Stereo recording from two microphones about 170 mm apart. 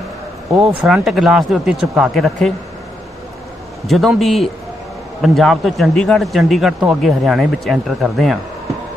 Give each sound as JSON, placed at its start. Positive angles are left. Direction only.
{"t": 0.6, "sound": "a man's voice", "side_deg": -5}
{"t": 3.8, "sound": "a man's voice", "side_deg": 0}